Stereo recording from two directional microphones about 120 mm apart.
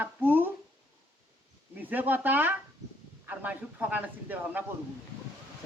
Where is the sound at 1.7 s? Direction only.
15° right (ahead or behind).